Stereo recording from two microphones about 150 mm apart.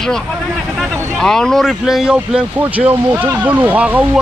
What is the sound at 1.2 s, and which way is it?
A man's voice, 5° left (ahead or behind).